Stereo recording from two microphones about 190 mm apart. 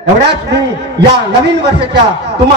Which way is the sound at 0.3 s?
60° right (ahead or behind).